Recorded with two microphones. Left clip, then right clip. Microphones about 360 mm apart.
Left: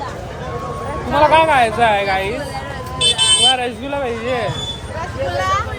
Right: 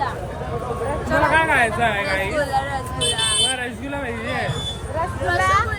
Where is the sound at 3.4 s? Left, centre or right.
Centre.